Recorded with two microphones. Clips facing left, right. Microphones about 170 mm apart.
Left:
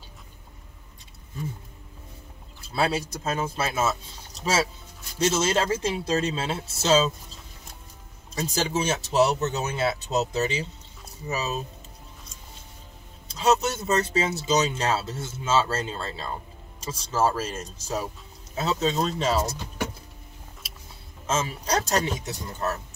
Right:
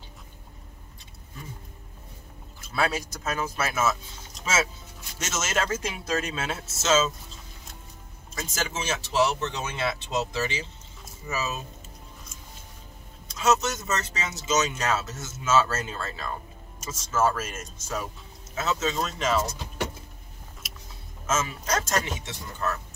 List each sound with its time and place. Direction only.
2.6 s speech: 30° left (ahead or behind)
8.4 s speech: 30° left (ahead or behind)
13.3 s speech: 30° left (ahead or behind)
21.3 s speech: 30° left (ahead or behind)